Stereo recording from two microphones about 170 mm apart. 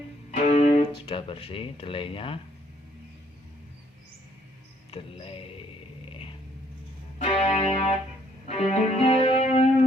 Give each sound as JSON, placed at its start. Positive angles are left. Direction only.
{"t": 0.3, "sound": "speech", "side_deg": 40}
{"t": 4.9, "sound": "speech", "side_deg": 30}
{"t": 7.2, "sound": "music", "side_deg": 40}